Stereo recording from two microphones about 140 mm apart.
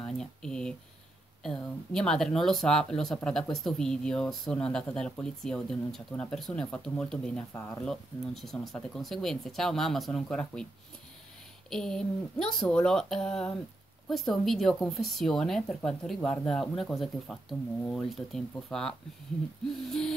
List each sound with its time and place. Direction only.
0.0 s speech: 5° left (ahead or behind)
11.7 s speech: 5° left (ahead or behind)